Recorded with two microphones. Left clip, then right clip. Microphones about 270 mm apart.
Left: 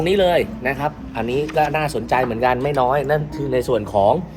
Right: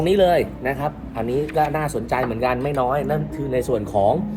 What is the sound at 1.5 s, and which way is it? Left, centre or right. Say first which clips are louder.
Speech: left 3 dB; left.